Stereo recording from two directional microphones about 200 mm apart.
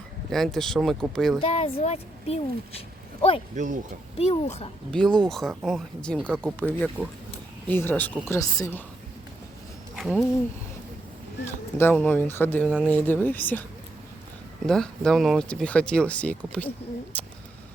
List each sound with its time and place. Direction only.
0.3 s speech: centre (ahead or behind)
1.4 s speech: 30° left (ahead or behind)
3.5 s speech: 40° right (ahead or behind)
4.2 s speech: 30° left (ahead or behind)
4.9 s speech: 5° left (ahead or behind)
9.9 s a sound: centre (ahead or behind)
11.4 s speech: 10° left (ahead or behind)
14.7 s speech: 5° left (ahead or behind)